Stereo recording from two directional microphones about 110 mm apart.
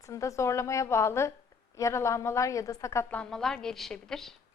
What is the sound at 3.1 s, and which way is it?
A woman's voice, 5° left (ahead or behind).